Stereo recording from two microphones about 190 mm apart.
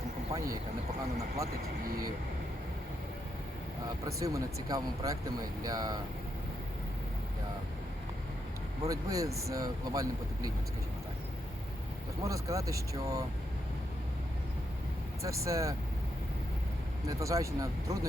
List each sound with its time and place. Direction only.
1.6 s speech: 50° right (ahead or behind)
4.0 s speech: 15° right (ahead or behind)
8.8 s speech: 15° right (ahead or behind)
12.2 s speech: 15° right (ahead or behind)
15.2 s speech: 15° right (ahead or behind)
17.1 s speech: 15° right (ahead or behind)